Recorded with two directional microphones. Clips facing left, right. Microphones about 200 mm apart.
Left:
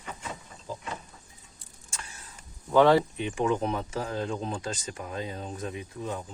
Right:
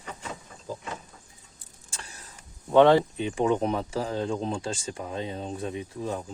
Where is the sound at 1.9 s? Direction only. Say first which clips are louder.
Even; 35° right (ahead or behind).